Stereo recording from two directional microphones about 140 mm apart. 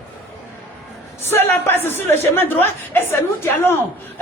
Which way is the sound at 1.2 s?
15° left (ahead or behind).